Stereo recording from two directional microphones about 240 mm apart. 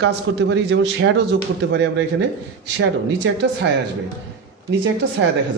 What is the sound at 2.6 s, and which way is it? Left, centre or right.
Speech, right.